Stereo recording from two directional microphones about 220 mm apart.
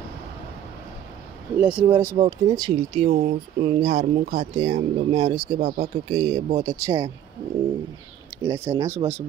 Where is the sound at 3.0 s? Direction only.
35° right (ahead or behind).